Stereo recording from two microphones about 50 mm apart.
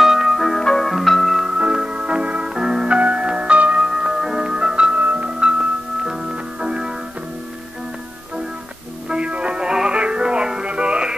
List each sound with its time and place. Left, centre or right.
0.0 s music: centre
1.5 s music: centre
3.0 s music: right
3.8 s music: centre
4.9 s music: right
9.1 s music: right